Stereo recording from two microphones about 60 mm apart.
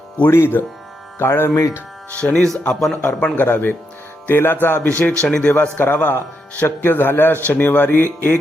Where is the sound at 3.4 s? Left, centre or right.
Left; by 5.5 s centre.